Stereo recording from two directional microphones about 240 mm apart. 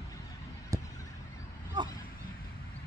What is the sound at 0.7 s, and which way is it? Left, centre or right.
Vehicle, centre.